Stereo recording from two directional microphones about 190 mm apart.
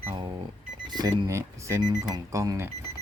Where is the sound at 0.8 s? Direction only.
20° right (ahead or behind).